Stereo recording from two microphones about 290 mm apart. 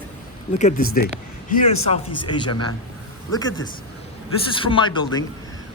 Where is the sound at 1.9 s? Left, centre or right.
Centre.